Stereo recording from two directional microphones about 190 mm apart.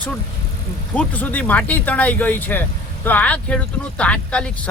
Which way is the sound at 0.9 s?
10° left (ahead or behind).